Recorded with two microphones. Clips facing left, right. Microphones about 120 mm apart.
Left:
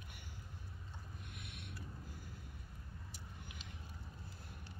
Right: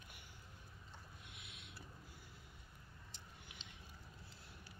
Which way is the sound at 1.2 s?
50° left (ahead or behind).